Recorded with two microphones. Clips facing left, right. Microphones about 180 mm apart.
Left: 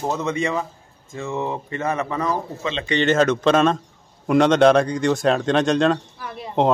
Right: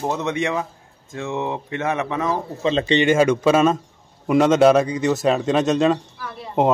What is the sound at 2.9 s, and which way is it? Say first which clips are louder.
A man's voice: even; 10° right (ahead or behind).